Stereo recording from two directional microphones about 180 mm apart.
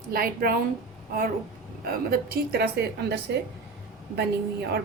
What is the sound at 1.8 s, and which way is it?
A woman's voice, 55° right (ahead or behind).